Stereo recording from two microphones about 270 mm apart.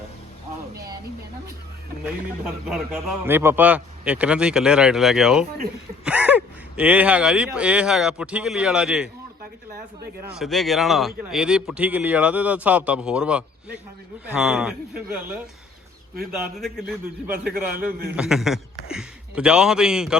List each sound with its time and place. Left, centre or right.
2.4 s speech: centre
10.3 s speech: centre
16.6 s speech: centre
17.3 s a man's voice: right
18.2 s speech: centre